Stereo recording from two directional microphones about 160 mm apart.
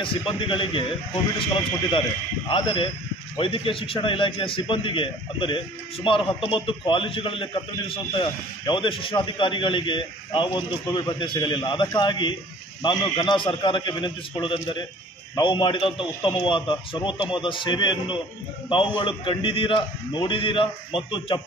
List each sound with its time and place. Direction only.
0.0 s a man's voice: 30° left (ahead or behind)